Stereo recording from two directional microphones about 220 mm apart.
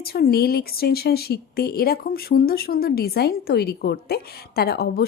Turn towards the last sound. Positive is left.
turn(degrees=45)  # may be behind; listen again after turning